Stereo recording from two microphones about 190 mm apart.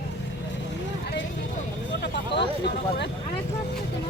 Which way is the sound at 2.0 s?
65° left (ahead or behind).